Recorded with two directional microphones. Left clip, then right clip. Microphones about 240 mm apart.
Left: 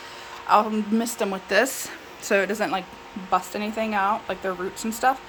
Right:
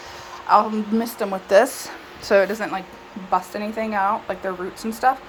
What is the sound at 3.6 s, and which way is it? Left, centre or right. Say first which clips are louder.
A woman's voice: right 2 dB; left.